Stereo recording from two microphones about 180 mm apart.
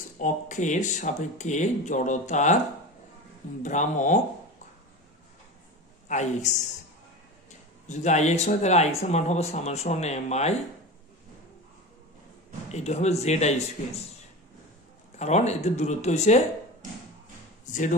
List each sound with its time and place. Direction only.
0.2 s speech: 45° left (ahead or behind)
3.6 s speech: 45° left (ahead or behind)
6.0 s speech: 40° left (ahead or behind)
7.9 s speech: 40° left (ahead or behind)
12.7 s speech: 40° left (ahead or behind)
15.1 s speech: 40° left (ahead or behind)